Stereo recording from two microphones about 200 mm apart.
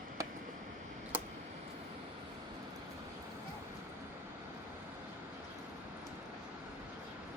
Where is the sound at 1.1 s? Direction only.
10° right (ahead or behind).